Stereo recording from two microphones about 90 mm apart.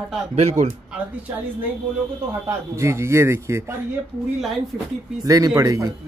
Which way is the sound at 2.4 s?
30° right (ahead or behind).